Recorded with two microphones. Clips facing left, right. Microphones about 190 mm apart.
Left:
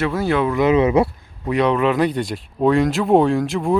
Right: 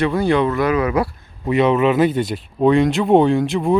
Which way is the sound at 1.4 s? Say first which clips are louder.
Right 2 dB; 5° right (ahead or behind).